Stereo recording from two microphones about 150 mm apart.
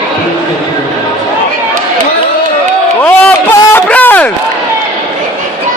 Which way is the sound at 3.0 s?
15° left (ahead or behind).